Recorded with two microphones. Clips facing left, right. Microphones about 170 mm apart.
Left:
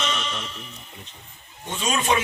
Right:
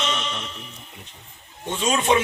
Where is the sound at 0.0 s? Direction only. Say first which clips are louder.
Right 1 dB; 20° right (ahead or behind).